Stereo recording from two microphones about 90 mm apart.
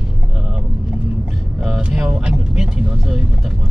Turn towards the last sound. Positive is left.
turn(degrees=-5)  # may be behind; listen again after turning